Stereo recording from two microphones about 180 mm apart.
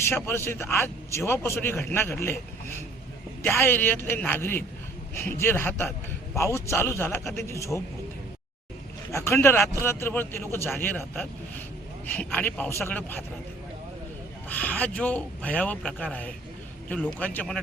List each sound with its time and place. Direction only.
0.1 s a man's voice: 15° left (ahead or behind)
3.4 s a man's voice: 10° left (ahead or behind)
9.1 s a man's voice: 15° left (ahead or behind)
14.5 s a man's voice: 10° left (ahead or behind)